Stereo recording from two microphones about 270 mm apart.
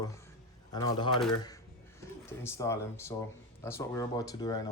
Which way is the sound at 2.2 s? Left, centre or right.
Centre.